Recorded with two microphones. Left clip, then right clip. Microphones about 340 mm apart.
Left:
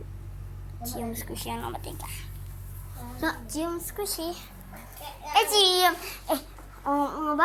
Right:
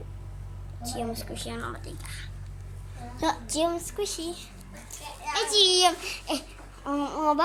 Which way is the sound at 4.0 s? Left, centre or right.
Centre.